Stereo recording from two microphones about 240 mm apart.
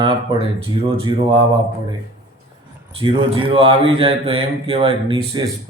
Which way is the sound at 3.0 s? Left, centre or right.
Right.